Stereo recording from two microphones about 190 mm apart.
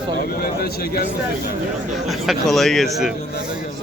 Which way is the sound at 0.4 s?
50° left (ahead or behind).